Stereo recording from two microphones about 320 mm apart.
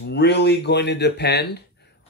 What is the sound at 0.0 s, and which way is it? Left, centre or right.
Speech, left.